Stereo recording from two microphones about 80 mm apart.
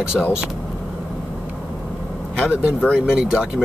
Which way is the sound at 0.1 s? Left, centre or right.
Centre.